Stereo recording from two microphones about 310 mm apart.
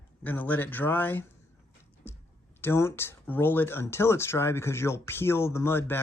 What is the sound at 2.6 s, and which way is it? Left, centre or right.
Speech, centre.